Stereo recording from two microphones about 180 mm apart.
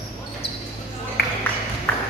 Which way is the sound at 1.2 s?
65° left (ahead or behind).